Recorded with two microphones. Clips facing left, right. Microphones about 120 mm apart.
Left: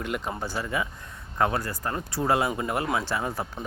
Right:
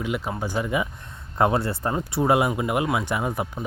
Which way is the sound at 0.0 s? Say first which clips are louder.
Right 3 dB; 5° right (ahead or behind).